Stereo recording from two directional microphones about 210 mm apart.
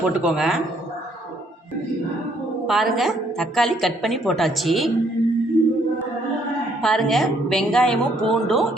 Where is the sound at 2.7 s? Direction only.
Centre (ahead or behind).